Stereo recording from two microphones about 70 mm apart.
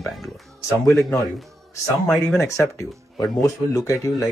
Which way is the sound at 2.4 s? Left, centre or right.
Left.